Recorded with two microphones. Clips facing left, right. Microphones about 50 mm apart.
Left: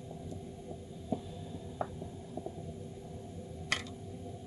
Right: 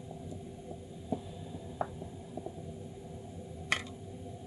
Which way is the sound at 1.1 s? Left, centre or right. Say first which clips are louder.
Even; centre.